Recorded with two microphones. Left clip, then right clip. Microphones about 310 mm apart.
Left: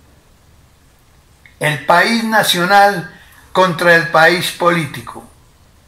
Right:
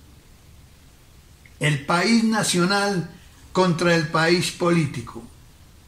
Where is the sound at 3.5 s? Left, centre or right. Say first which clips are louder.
Left 9 dB; left.